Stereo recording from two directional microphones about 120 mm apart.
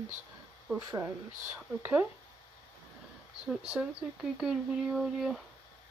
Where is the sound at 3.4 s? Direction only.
5° right (ahead or behind).